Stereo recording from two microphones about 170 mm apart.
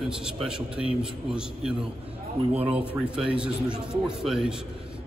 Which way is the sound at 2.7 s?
5° right (ahead or behind).